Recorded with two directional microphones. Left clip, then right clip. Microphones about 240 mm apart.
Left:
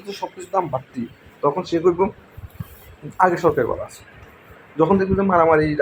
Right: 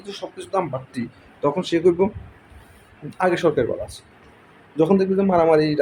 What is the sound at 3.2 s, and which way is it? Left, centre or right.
Speech, centre.